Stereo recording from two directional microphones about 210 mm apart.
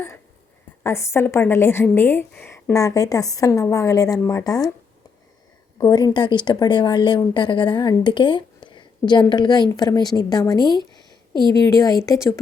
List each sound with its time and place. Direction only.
0.8 s a woman's voice: 10° left (ahead or behind)
5.8 s a woman's voice: 20° left (ahead or behind)